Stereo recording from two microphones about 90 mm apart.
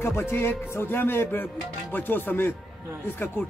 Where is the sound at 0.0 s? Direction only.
30° left (ahead or behind).